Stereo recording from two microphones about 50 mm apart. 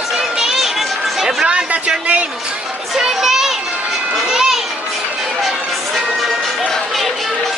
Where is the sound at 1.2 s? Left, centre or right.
Centre.